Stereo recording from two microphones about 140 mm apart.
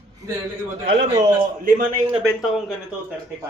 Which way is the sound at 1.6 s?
90° right.